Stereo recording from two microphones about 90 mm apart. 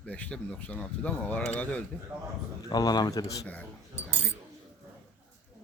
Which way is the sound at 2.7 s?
50° left (ahead or behind).